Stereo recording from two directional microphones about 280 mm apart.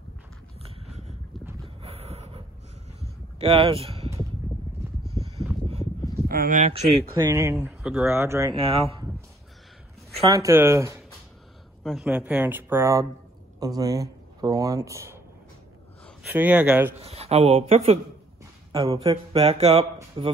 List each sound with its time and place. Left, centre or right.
0.6 s a sound: right
5.2 s a sound: right
6.2 s speech: right
7.2 s speech: centre
10.3 s speech: centre
16.2 s speech: centre
17.0 s speech: right